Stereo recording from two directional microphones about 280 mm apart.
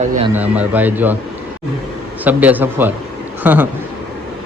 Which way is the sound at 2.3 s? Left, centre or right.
Centre.